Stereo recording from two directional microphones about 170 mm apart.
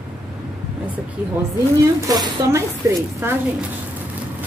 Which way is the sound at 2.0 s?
20° right (ahead or behind).